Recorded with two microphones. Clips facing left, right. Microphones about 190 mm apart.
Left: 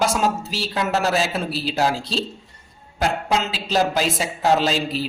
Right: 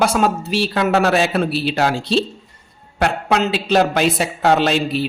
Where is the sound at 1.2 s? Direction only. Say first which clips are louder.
Right 6 dB; 60° right (ahead or behind).